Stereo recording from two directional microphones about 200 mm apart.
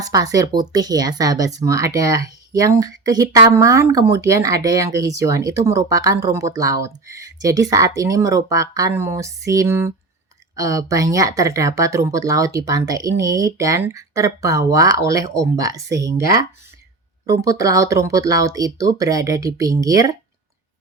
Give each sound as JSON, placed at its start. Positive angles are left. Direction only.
{"t": 0.0, "sound": "speech", "side_deg": -20}